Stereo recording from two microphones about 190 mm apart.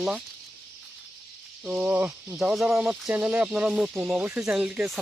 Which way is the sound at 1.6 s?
5° right (ahead or behind).